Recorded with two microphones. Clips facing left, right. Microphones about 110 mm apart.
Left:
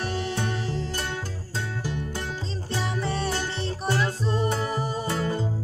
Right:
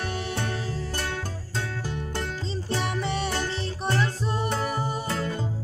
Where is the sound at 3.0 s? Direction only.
15° right (ahead or behind).